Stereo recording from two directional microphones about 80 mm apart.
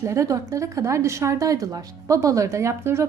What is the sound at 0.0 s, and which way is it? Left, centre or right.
A woman's voice, right.